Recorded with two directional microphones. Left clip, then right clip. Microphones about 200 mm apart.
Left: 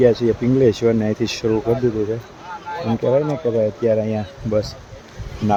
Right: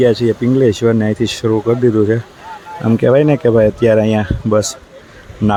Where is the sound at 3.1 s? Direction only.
45° right (ahead or behind).